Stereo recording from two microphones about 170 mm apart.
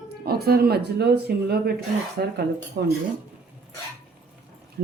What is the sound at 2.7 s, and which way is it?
Speech, 90° right.